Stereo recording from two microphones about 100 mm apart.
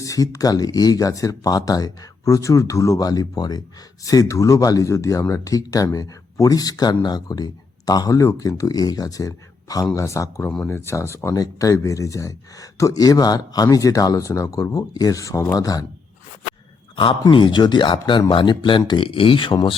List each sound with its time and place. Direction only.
0.0 s speech: 35° left (ahead or behind)
10.4 s speech: 10° left (ahead or behind)
10.7 s speech: 25° left (ahead or behind)
16.9 s speech: 60° left (ahead or behind)